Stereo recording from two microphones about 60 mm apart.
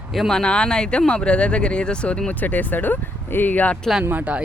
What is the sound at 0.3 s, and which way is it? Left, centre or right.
Speech, centre.